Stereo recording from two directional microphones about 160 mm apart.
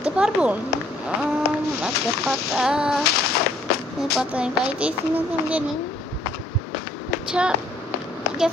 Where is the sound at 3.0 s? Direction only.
85° left.